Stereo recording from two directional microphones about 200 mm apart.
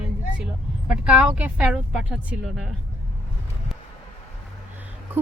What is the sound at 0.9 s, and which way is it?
A woman's voice, 5° right (ahead or behind).